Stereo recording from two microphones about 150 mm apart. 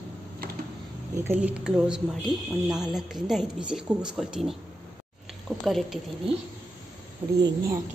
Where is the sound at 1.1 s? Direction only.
15° right (ahead or behind).